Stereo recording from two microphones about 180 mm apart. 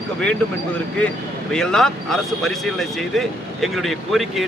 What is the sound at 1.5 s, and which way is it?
Speech, 5° left (ahead or behind).